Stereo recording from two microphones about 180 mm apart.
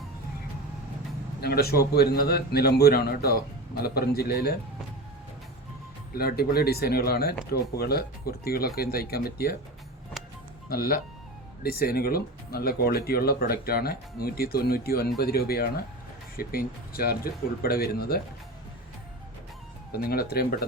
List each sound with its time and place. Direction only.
1.4 s speech: 60° left (ahead or behind)
6.1 s speech: 60° left (ahead or behind)
10.7 s speech: 55° left (ahead or behind)
19.9 s speech: 55° left (ahead or behind)